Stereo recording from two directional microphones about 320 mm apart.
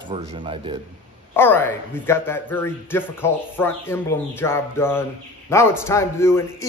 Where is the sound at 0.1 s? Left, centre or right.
Centre.